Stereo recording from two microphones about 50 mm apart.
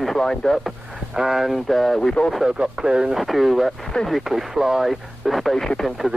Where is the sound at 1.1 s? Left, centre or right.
Centre.